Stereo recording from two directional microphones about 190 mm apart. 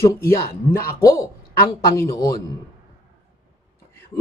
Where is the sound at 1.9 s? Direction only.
15° left (ahead or behind).